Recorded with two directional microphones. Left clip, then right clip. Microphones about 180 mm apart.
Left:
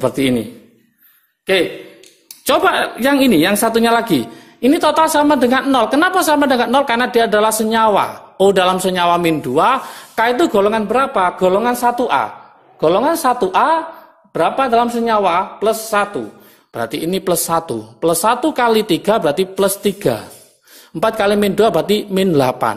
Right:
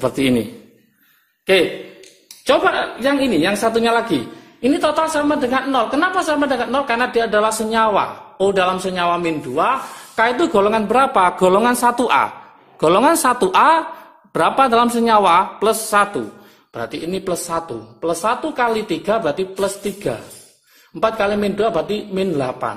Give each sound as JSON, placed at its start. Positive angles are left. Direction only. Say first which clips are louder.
{"t": 0.0, "sound": "a man's voice", "louder": "left 1 dB", "side_deg": 10}
{"t": 2.4, "sound": "a woman's voice", "louder": "left 2 dB", "side_deg": 35}
{"t": 10.1, "sound": "speech", "louder": "left 2 dB", "side_deg": 20}
{"t": 16.7, "sound": "a woman's voice", "louder": "left 5 dB", "side_deg": 25}